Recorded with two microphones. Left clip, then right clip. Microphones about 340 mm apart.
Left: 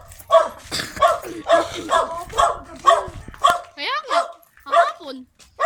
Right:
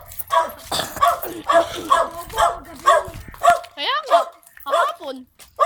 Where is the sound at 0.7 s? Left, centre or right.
Centre.